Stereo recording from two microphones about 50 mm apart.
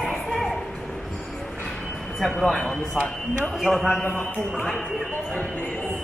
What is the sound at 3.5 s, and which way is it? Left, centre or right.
Speech, centre.